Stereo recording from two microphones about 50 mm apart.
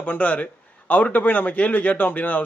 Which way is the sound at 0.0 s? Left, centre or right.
Left.